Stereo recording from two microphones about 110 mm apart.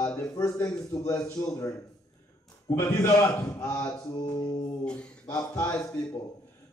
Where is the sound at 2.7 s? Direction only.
25° left (ahead or behind).